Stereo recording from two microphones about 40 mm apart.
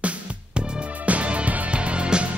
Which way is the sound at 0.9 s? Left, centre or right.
Right.